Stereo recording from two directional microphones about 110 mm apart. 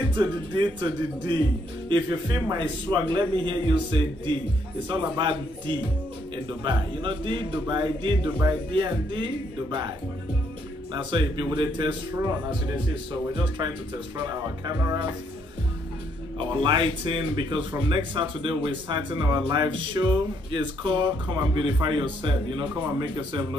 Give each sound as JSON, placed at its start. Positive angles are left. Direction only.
{"t": 0.1, "sound": "a man's voice", "side_deg": -45}
{"t": 12.8, "sound": "speech", "side_deg": -50}
{"t": 16.3, "sound": "speech", "side_deg": -50}